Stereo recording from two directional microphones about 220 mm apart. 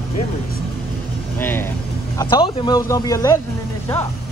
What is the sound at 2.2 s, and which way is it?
Speech, 20° left (ahead or behind).